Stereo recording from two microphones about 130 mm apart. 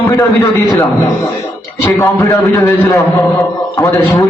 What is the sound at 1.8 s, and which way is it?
A man's voice, 25° left (ahead or behind).